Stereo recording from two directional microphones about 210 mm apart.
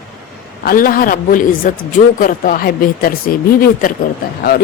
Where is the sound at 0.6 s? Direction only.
45° left (ahead or behind).